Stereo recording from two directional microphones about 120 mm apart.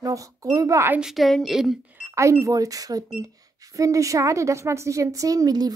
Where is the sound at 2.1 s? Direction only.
25° right (ahead or behind).